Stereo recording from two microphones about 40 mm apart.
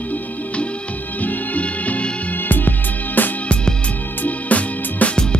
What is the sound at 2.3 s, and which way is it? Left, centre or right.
Music, left.